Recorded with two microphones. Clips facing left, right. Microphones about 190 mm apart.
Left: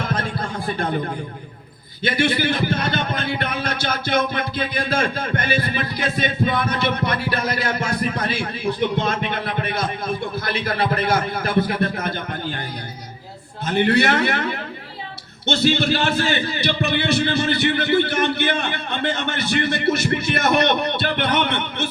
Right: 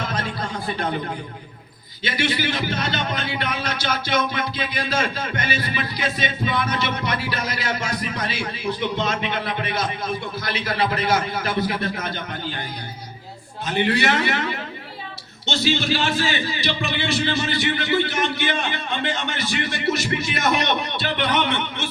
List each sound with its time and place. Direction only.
0.0 s speech: 55° left (ahead or behind)
2.0 s a man's voice: 50° left (ahead or behind)
13.7 s a man's voice: 55° left (ahead or behind)